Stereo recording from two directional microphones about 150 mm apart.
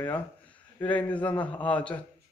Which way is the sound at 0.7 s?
10° left (ahead or behind).